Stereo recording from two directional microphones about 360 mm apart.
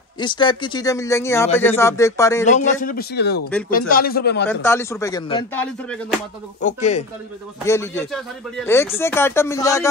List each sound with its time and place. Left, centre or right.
0.2 s speech: centre
2.4 s a man's voice: centre
4.5 s speech: centre
6.6 s a man's voice: centre
7.6 s speech: centre